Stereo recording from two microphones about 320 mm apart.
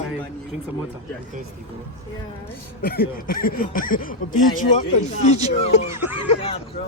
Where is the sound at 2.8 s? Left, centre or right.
Left.